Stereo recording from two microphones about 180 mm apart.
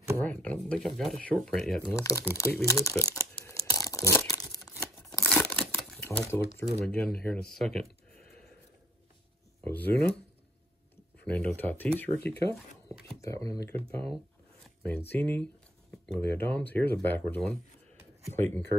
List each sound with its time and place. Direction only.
0.2 s speech: 10° left (ahead or behind)
2.0 s speech: 15° left (ahead or behind)
3.2 s tearing: 15° left (ahead or behind)
5.0 s crumpling: 5° left (ahead or behind)
6.0 s speech: 10° left (ahead or behind)
9.6 s speech: 10° left (ahead or behind)
11.2 s speech: 5° left (ahead or behind)
14.6 s zipper: 10° left (ahead or behind)
15.1 s speech: 10° left (ahead or behind)